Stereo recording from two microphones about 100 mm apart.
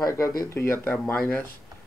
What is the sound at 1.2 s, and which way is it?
Speech, 10° left (ahead or behind).